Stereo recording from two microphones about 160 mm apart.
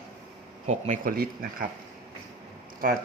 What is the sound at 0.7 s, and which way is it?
Speech, 45° right (ahead or behind).